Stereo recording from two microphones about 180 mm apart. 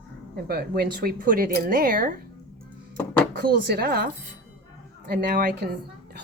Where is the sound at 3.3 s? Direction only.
60° right (ahead or behind).